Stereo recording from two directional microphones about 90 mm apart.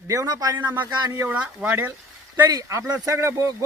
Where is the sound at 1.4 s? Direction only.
10° right (ahead or behind).